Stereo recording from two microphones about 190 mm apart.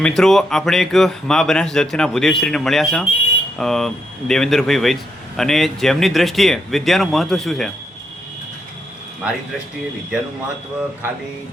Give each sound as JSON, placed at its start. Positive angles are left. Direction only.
{"t": 0.0, "sound": "speech", "side_deg": 5}
{"t": 9.2, "sound": "speech", "side_deg": -5}